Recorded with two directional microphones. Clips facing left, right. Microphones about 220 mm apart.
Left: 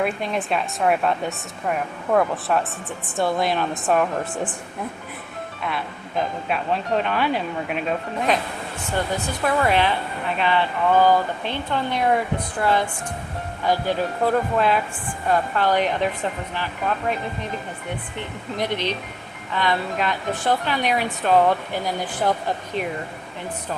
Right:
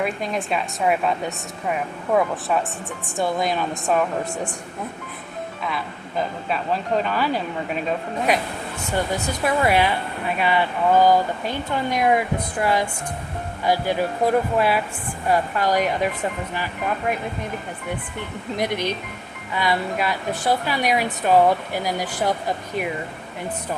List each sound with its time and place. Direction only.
0.3 s speech: centre (ahead or behind)
6.5 s speech: centre (ahead or behind)
8.3 s speech: 10° right (ahead or behind)
13.7 s speech: 10° right (ahead or behind)
18.6 s speech: 10° right (ahead or behind)